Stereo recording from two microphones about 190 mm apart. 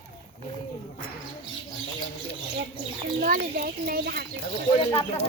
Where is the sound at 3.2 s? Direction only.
50° right (ahead or behind).